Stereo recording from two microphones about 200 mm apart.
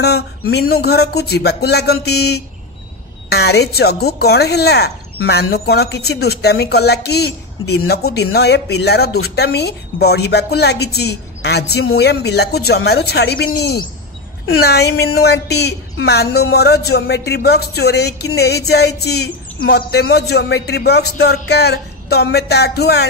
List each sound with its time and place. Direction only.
0.0 s speech: 55° left (ahead or behind)